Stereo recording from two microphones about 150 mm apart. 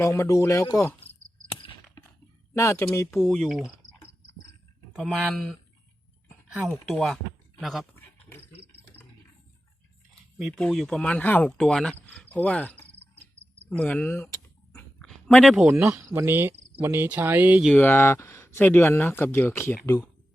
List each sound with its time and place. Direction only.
0.0 s speech: 20° left (ahead or behind)
2.6 s speech: 20° left (ahead or behind)
3.2 s speech: centre (ahead or behind)
4.9 s speech: centre (ahead or behind)
6.7 s speech: 5° left (ahead or behind)
7.9 s a sound: 15° left (ahead or behind)
10.6 s speech: 5° left (ahead or behind)
14.7 s a sound: 5° left (ahead or behind)
15.9 s cricket: 15° right (ahead or behind)
17.7 s speech: 15° left (ahead or behind)